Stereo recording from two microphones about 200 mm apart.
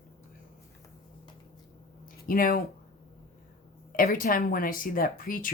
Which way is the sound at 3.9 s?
45° left (ahead or behind).